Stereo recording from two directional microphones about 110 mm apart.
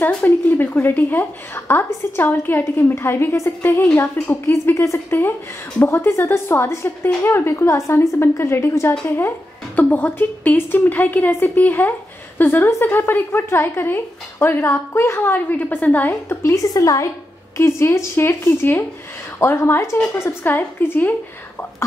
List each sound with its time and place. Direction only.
0.0 s a woman's voice: 20° left (ahead or behind)